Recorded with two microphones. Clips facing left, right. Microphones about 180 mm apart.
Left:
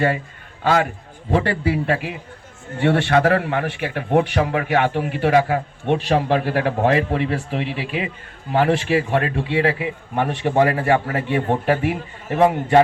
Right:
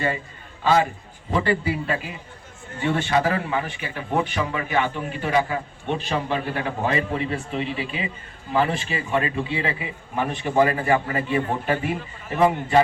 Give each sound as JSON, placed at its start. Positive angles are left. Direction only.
{"t": 0.6, "sound": "a man's voice", "side_deg": 65}